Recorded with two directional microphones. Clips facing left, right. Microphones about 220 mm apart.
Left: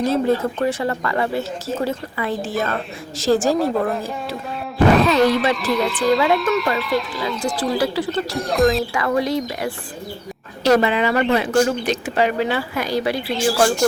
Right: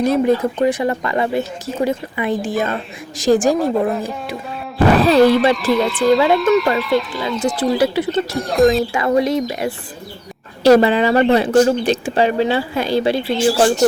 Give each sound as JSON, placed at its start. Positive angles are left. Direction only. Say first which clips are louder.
{"t": 0.0, "sound": "speech", "louder": "right 3 dB", "side_deg": -15}
{"t": 4.9, "sound": "speech", "louder": "right 4 dB", "side_deg": -35}
{"t": 5.2, "sound": "speech", "louder": "right 5 dB", "side_deg": 0}
{"t": 7.6, "sound": "speech", "louder": "right 4 dB", "side_deg": -20}
{"t": 8.3, "sound": "speech", "louder": "right 3 dB", "side_deg": 0}
{"t": 8.9, "sound": "speech", "louder": "right 4 dB", "side_deg": -25}